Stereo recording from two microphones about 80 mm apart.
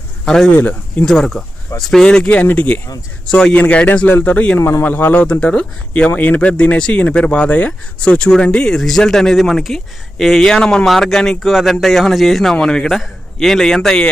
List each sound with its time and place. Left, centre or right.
0.3 s speech: centre
0.5 s speech: left
1.0 s speech: centre; by 2.8 s left
3.2 s speech: centre
4.6 s speech: left
4.9 s speech: left